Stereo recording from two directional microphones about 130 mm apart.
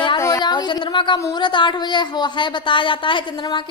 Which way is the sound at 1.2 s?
25° left (ahead or behind).